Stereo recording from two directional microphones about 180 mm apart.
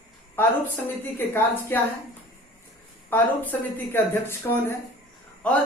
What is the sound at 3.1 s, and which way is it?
A man's voice, 10° left (ahead or behind).